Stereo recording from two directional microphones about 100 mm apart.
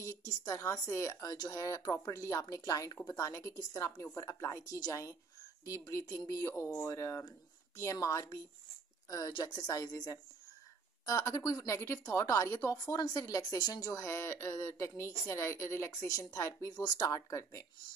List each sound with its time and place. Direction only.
0.0 s a woman's voice: 30° left (ahead or behind)
9.3 s a woman's voice: 45° left (ahead or behind)
12.7 s a woman's voice: 40° left (ahead or behind)
14.0 s a woman's voice: 25° left (ahead or behind)